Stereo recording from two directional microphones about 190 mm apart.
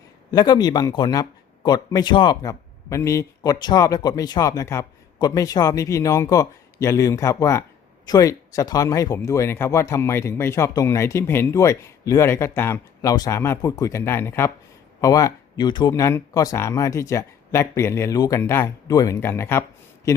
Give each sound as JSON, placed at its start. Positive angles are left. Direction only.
{"t": 0.3, "sound": "speech", "side_deg": 20}